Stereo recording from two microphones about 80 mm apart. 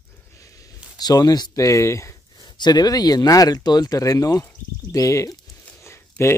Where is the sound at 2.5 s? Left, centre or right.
Left.